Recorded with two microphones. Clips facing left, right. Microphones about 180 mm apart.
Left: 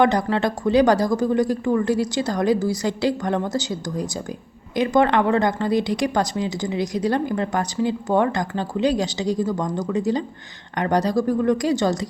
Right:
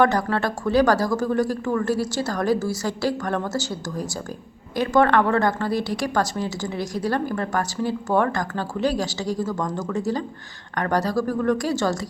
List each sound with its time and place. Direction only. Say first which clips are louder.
0.0 s speech: left 2 dB; 15° left (ahead or behind)